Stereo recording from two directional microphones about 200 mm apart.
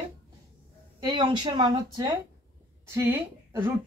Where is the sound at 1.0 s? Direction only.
20° right (ahead or behind).